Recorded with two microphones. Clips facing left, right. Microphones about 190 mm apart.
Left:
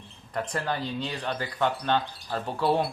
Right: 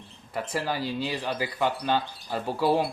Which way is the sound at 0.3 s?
5° right (ahead or behind).